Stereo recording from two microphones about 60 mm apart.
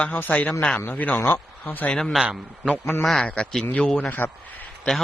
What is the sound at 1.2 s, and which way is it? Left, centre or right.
Speech, left.